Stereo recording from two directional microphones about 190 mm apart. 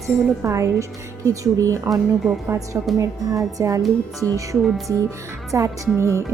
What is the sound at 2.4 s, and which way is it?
Speech, 15° right (ahead or behind).